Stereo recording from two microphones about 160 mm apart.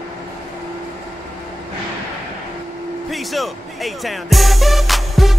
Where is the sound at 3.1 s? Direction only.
Centre (ahead or behind).